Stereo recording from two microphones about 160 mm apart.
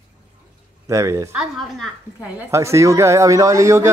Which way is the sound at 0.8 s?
20° right (ahead or behind).